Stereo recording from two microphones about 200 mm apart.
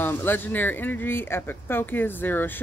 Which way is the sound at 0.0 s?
10° left (ahead or behind).